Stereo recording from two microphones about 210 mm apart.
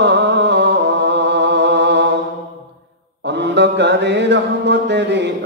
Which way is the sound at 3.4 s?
55° right (ahead or behind).